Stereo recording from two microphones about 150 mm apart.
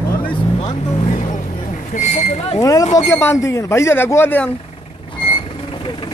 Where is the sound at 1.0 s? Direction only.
50° left (ahead or behind).